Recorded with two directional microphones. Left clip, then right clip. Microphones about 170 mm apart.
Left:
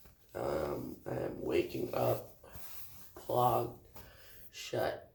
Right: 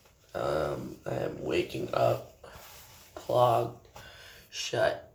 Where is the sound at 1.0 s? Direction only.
25° left (ahead or behind).